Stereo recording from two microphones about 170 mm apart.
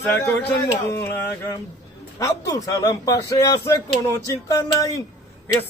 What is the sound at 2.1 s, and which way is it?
A man's voice, 20° left (ahead or behind).